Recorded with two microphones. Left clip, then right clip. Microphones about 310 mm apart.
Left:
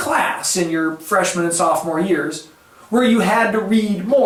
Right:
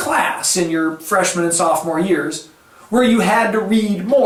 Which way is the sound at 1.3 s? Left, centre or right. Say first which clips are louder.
Right 1 dB; centre.